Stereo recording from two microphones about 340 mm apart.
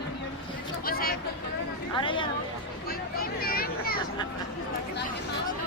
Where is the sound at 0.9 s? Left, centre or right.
Left.